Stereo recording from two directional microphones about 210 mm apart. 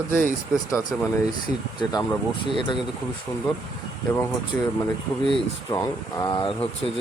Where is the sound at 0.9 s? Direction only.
Centre (ahead or behind).